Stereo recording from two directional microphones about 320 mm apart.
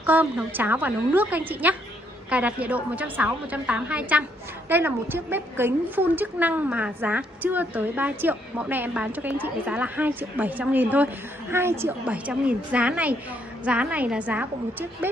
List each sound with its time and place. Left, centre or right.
0.0 s a woman's voice: centre